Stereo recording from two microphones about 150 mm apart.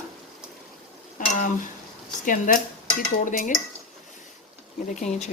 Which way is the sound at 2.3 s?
65° left (ahead or behind).